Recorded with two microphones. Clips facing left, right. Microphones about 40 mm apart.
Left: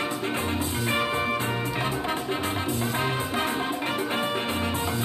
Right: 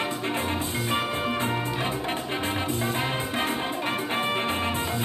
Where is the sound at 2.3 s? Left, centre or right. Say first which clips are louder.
Even; right.